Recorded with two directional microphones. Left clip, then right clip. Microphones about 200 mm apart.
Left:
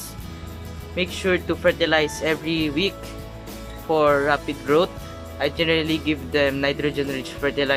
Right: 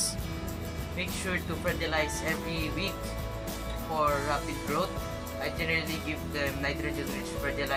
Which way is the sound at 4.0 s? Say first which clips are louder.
Left 9 dB; 50° left (ahead or behind).